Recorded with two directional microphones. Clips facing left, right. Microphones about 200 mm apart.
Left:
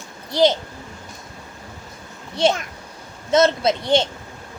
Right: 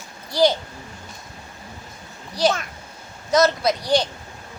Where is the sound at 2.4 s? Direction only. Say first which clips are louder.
Left 2 dB; 25° left (ahead or behind).